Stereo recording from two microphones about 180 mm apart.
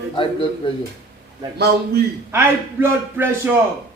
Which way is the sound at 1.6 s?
65° right (ahead or behind).